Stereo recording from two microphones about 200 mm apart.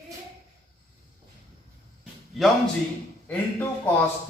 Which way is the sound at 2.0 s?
Centre (ahead or behind).